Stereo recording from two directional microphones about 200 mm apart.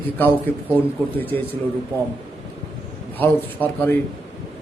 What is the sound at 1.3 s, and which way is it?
Speech, 10° left (ahead or behind).